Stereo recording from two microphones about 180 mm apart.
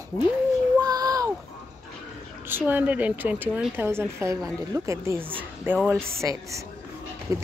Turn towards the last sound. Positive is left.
turn(degrees=-20)  # may be behind; listen again after turning